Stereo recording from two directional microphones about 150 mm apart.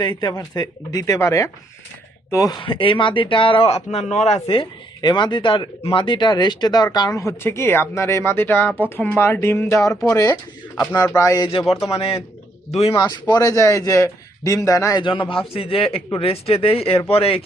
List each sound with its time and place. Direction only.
0.0 s speech: 30° left (ahead or behind)
9.9 s speech: 5° left (ahead or behind)
11.0 s speech: 15° left (ahead or behind)
11.9 s a man's voice: 40° left (ahead or behind)
13.0 s speech: 25° left (ahead or behind)
15.0 s speech: 35° left (ahead or behind)